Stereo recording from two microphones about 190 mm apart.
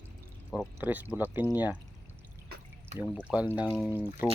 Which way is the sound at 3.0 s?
10° right (ahead or behind).